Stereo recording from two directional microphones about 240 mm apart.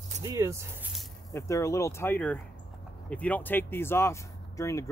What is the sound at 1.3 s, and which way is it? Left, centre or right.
Speech, centre.